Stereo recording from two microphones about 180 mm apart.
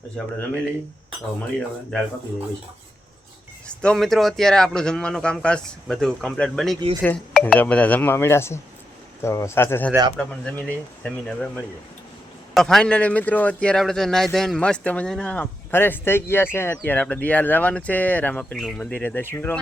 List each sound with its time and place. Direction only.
1.4 s speech: 5° left (ahead or behind)
3.7 s a man's voice: 5° left (ahead or behind)
9.9 s a man's voice: 20° right (ahead or behind)
11.0 s a man's voice: 5° left (ahead or behind)